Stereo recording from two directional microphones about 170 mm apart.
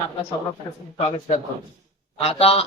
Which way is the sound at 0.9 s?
35° left (ahead or behind).